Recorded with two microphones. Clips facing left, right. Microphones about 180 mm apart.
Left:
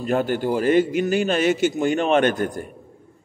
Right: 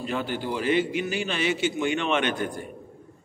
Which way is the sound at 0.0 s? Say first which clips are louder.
Left 8 dB; 45° left (ahead or behind).